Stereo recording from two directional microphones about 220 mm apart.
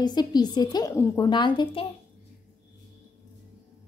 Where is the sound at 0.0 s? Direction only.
20° left (ahead or behind).